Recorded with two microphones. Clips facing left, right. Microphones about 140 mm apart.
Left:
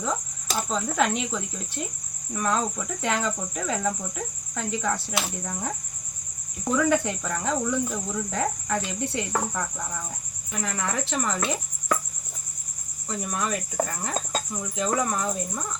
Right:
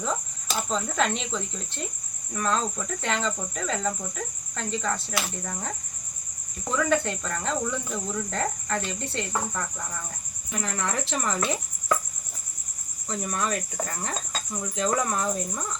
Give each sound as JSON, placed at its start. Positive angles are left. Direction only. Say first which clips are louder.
{"t": 0.7, "sound": "speech", "louder": "left 2 dB", "side_deg": 5}
{"t": 13.1, "sound": "speech", "louder": "even", "side_deg": 5}
{"t": 13.8, "sound": "speech", "louder": "left 5 dB", "side_deg": 50}
{"t": 14.5, "sound": "speech", "louder": "right 1 dB", "side_deg": 5}